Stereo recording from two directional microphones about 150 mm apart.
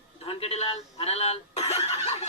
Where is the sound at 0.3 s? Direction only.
40° left (ahead or behind).